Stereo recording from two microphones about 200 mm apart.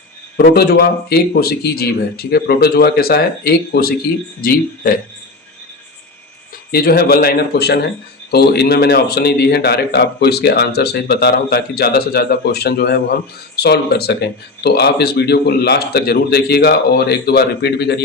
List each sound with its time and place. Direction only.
0.3 s a man's voice: 55° left (ahead or behind)
6.7 s a man's voice: 50° left (ahead or behind)